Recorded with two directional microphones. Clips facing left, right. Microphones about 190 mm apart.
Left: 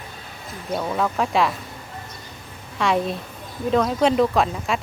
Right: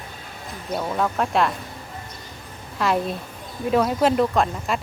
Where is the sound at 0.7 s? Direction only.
Centre (ahead or behind).